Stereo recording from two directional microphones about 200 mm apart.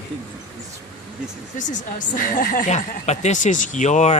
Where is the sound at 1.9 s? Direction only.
45° left (ahead or behind).